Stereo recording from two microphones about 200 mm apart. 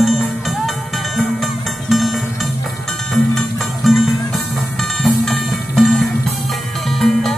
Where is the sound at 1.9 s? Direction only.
Centre (ahead or behind).